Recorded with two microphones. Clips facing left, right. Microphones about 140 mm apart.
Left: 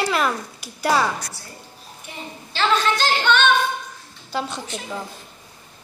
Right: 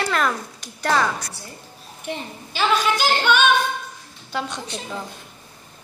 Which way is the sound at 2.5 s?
10° right (ahead or behind).